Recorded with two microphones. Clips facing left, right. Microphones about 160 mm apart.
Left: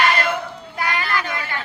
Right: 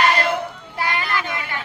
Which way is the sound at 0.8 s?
25° right (ahead or behind).